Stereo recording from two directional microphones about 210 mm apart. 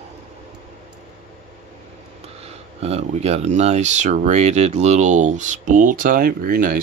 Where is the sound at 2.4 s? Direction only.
30° right (ahead or behind).